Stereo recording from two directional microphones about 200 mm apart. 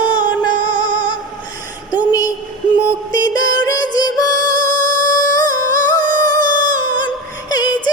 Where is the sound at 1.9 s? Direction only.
20° left (ahead or behind).